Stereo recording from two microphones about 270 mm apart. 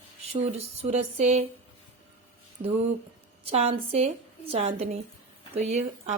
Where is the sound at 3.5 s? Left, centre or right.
Right.